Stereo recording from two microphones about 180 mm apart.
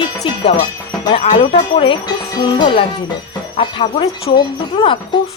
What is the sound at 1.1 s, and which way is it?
Speech, 35° left (ahead or behind).